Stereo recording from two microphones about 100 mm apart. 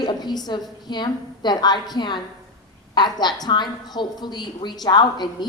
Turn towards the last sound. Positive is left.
turn(degrees=45)  # may be behind; listen again after turning